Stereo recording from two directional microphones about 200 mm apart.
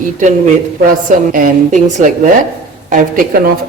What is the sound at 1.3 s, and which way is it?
Speech, 40° right (ahead or behind).